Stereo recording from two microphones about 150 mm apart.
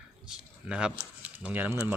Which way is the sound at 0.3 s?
5° right (ahead or behind).